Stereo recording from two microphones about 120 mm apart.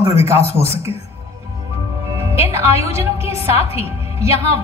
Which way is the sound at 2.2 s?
25° right (ahead or behind).